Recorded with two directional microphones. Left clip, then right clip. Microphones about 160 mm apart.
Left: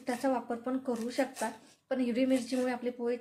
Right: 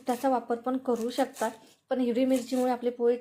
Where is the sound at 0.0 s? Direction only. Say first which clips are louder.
Right 5 dB; 25° right (ahead or behind).